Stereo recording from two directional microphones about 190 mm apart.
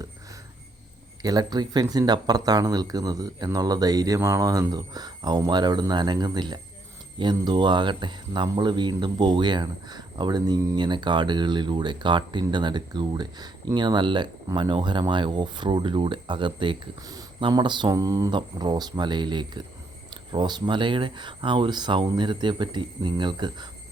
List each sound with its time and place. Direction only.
1.2 s speech: 20° right (ahead or behind)